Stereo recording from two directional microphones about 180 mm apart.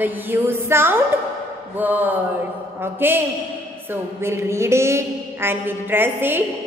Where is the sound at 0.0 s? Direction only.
10° right (ahead or behind).